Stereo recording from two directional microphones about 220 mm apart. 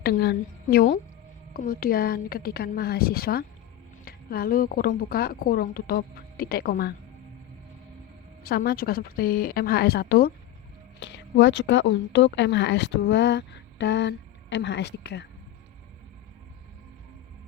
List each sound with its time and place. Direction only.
0.0 s speech: 45° left (ahead or behind)
8.4 s speech: 45° left (ahead or behind)